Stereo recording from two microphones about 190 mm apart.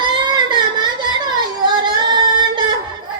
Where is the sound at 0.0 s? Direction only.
25° right (ahead or behind).